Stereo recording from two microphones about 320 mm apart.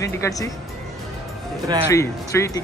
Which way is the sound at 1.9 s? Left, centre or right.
Centre.